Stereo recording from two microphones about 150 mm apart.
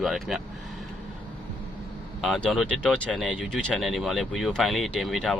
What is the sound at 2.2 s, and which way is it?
Speech, 5° left (ahead or behind).